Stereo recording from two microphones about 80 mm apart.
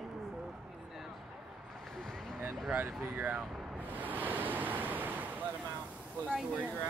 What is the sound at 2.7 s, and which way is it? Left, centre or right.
Waves, right.